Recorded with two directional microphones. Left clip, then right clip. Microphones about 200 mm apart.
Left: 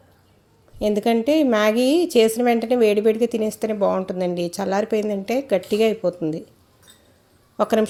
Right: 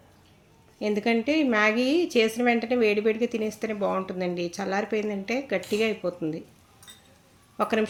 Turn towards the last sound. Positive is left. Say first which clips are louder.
# left 6 dB
turn(degrees=35)  # may be behind; listen again after turning